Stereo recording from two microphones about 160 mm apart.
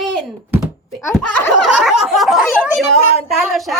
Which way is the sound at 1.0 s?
15° left (ahead or behind).